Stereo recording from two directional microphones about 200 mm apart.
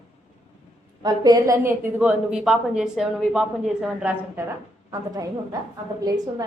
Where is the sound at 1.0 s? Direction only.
20° right (ahead or behind).